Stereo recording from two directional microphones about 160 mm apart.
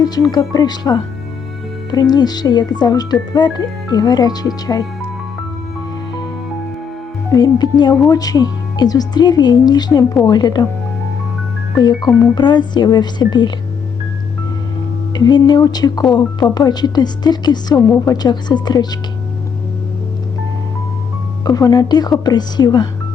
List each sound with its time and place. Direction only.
0.0 s speech: 25° left (ahead or behind)
7.3 s speech: 25° left (ahead or behind)
11.8 s speech: 25° left (ahead or behind)
15.1 s speech: 25° left (ahead or behind)
21.4 s speech: 25° left (ahead or behind)